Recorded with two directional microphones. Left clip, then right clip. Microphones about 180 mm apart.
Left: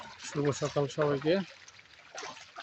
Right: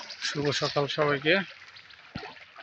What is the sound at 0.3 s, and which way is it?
Speech, 5° right (ahead or behind).